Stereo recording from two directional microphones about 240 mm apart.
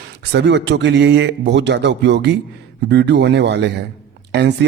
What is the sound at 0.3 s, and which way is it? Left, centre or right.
Speech, right.